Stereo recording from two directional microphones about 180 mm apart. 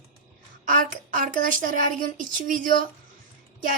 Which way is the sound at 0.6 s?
50° right (ahead or behind).